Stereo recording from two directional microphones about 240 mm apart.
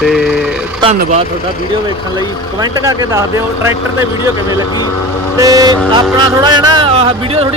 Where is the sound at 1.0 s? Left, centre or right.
Right.